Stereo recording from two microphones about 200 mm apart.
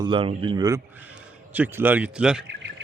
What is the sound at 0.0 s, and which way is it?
Speech, 25° right (ahead or behind).